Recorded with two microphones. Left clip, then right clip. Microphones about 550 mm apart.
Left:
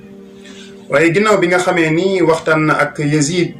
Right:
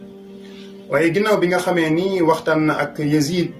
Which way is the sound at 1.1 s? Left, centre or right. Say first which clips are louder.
Left 5 dB; right.